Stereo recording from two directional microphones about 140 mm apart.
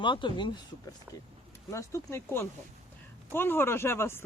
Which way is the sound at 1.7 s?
20° left (ahead or behind).